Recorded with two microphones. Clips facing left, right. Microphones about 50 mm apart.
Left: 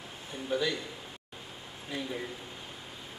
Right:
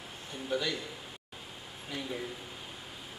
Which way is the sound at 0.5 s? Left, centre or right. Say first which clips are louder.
Left 2 dB; centre.